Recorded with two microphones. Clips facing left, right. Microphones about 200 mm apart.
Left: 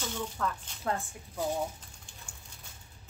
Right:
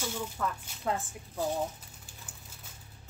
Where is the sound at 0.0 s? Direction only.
10° right (ahead or behind).